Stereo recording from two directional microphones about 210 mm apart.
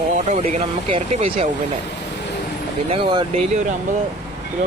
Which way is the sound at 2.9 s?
25° right (ahead or behind).